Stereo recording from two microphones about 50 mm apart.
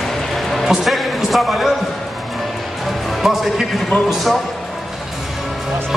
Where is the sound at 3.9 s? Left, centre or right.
Left.